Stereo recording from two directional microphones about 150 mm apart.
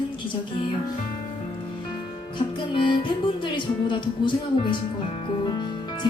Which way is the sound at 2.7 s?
35° left (ahead or behind).